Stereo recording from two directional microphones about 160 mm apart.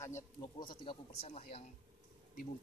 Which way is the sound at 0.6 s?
30° left (ahead or behind).